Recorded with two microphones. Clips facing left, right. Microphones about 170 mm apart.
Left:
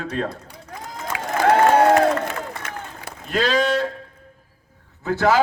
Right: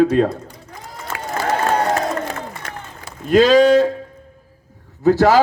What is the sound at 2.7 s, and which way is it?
Run, 50° right (ahead or behind).